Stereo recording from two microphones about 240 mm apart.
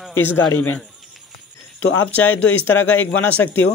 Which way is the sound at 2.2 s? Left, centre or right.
Centre.